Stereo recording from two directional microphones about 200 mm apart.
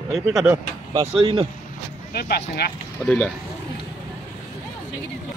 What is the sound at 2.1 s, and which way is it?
Speech, 50° left (ahead or behind).